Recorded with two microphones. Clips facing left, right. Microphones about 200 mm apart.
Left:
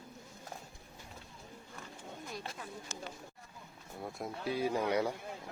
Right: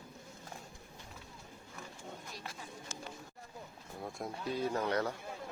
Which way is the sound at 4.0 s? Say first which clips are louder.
Left 1 dB; centre (ahead or behind).